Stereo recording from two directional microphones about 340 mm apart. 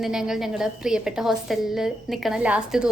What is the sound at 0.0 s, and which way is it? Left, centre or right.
A woman's voice, centre.